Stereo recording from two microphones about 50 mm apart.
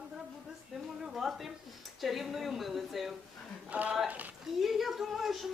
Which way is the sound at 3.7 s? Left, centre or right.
Right.